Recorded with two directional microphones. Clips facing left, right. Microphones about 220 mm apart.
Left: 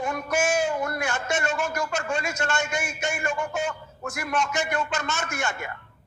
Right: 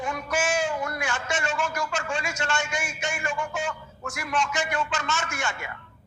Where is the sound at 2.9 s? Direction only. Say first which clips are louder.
Left 2 dB; 60° left (ahead or behind).